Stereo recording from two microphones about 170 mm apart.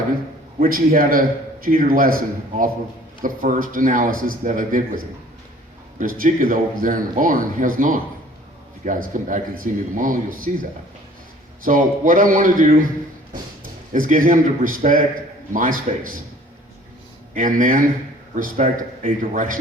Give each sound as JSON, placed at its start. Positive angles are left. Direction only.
{"t": 0.6, "sound": "a man's voice", "side_deg": -55}
{"t": 6.0, "sound": "a man's voice", "side_deg": -55}
{"t": 13.9, "sound": "a man's voice", "side_deg": -55}
{"t": 17.3, "sound": "a man's voice", "side_deg": -50}